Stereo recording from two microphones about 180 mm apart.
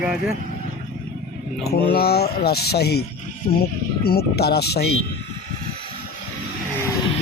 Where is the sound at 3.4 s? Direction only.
45° left (ahead or behind).